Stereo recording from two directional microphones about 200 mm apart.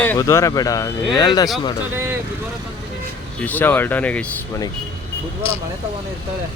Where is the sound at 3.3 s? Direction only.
10° left (ahead or behind).